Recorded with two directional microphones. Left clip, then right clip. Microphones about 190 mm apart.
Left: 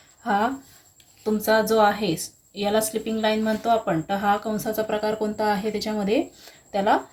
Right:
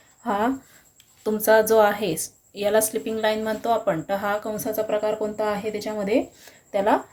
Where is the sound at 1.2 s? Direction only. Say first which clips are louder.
Right 3 dB; 40° right (ahead or behind).